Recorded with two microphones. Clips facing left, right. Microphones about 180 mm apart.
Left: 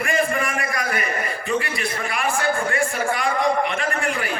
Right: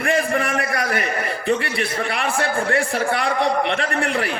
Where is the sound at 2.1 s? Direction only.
65° right (ahead or behind).